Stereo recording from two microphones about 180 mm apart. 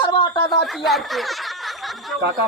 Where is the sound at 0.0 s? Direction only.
25° left (ahead or behind).